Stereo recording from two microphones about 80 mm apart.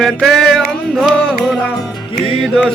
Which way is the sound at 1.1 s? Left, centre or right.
Centre.